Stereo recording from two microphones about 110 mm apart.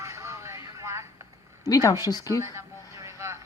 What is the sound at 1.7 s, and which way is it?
Speech, 35° left (ahead or behind).